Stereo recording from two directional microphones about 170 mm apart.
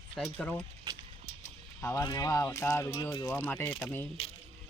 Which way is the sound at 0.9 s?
25° right (ahead or behind).